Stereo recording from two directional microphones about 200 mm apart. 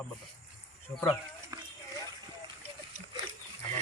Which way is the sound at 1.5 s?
15° right (ahead or behind).